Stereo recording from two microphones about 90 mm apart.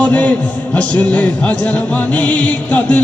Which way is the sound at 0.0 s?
15° left (ahead or behind).